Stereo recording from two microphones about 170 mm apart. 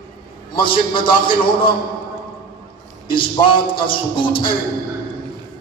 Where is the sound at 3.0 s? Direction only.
30° left (ahead or behind).